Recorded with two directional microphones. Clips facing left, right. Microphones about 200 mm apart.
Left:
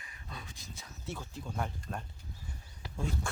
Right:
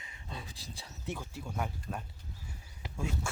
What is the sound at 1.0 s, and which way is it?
Speech, 15° right (ahead or behind).